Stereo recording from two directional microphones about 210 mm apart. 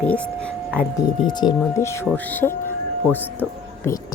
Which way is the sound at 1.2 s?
20° left (ahead or behind).